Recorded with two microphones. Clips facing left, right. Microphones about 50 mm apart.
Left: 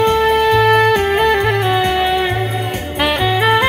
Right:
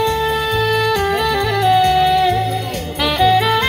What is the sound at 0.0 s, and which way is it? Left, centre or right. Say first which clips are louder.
Music: left 5 dB; left.